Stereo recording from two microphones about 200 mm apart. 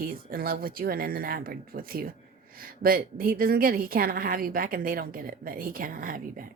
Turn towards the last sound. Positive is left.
turn(degrees=-45)  # may be behind; listen again after turning